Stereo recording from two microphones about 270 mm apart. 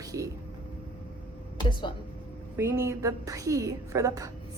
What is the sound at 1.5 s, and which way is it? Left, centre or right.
Speech, centre.